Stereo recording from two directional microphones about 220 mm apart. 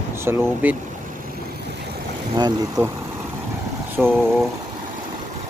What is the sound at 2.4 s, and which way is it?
Speech, 15° right (ahead or behind).